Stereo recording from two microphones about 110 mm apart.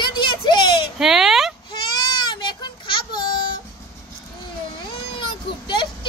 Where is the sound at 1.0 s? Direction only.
5° right (ahead or behind).